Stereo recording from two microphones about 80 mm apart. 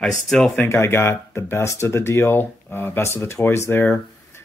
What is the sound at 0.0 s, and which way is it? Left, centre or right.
Speech, centre.